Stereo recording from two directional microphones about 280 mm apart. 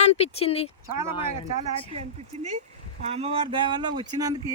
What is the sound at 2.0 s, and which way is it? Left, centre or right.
Speech, right.